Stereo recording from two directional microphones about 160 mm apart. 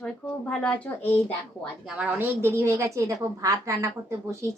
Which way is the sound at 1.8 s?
5° right (ahead or behind).